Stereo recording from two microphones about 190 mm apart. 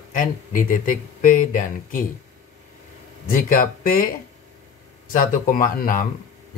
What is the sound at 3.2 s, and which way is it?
Speech, 45° left (ahead or behind).